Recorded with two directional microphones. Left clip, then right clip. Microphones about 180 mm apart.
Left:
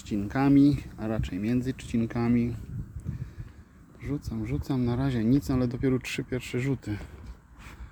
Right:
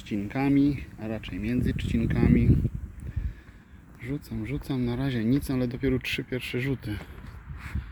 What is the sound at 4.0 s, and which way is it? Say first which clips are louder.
Speech: even; 10° left (ahead or behind).